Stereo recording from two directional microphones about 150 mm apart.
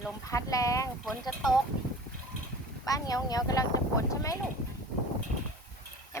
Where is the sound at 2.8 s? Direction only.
25° left (ahead or behind).